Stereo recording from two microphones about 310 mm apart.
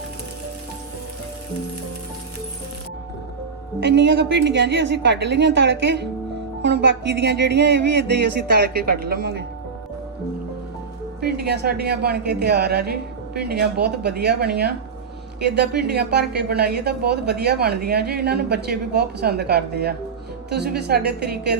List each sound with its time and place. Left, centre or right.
3.8 s a woman's voice: right
11.2 s a woman's voice: right